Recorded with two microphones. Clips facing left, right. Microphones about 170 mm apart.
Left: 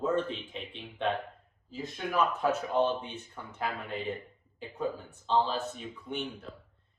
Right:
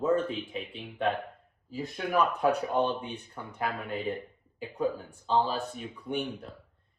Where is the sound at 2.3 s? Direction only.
15° right (ahead or behind).